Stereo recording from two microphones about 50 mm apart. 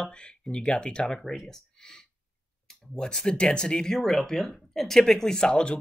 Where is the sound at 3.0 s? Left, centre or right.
Centre.